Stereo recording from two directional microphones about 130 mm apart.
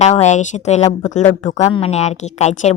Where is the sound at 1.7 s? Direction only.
50° left (ahead or behind).